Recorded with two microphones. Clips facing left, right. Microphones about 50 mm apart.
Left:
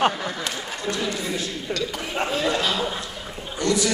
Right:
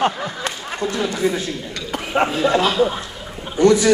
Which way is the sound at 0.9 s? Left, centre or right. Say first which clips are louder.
Right 6 dB; right.